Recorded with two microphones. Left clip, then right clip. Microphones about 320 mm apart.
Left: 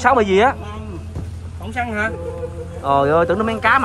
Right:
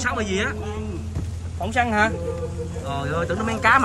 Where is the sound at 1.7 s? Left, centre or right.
Right.